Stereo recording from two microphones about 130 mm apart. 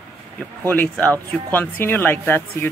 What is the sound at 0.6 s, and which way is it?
Speech, 10° left (ahead or behind).